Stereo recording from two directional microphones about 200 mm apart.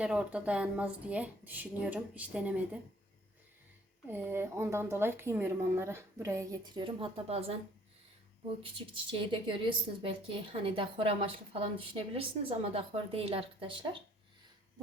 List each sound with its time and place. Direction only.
0.0 s a woman's voice: 5° right (ahead or behind)
4.1 s a woman's voice: 10° right (ahead or behind); by 7.5 s 30° right (ahead or behind)
8.6 s a woman's voice: 25° right (ahead or behind)